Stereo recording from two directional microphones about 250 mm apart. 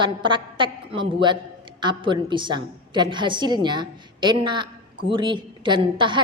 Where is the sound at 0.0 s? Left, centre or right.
Centre.